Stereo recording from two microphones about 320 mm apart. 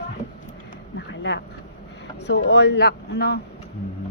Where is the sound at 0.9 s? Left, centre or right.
Left.